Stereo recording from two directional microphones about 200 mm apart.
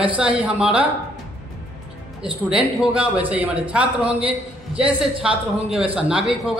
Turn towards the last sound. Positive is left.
turn(degrees=-5)  # may be behind; listen again after turning